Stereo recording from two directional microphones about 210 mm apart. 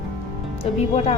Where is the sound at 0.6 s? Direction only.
30° left (ahead or behind).